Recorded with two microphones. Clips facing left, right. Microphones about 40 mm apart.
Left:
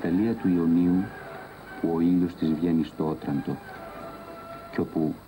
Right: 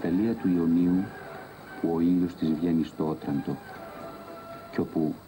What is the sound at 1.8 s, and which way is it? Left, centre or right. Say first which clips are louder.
Speech: left 1 dB; centre.